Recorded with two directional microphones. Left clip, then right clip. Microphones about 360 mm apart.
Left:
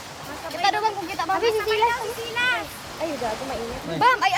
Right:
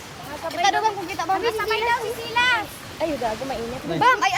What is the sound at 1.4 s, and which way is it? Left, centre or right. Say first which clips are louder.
Speech: left 1 dB; centre.